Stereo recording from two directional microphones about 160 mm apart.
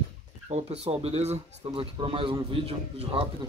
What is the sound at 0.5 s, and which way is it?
Speech, 40° right (ahead or behind).